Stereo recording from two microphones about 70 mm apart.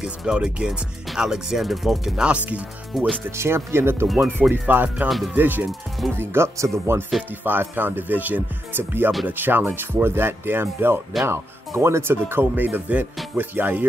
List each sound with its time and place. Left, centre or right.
0.0 s speech: centre
2.2 s speech: centre
2.9 s speech: centre
3.3 s speech: right
5.7 s speech: centre
6.1 s speech: right
7.1 s speech: centre
7.4 s speech: right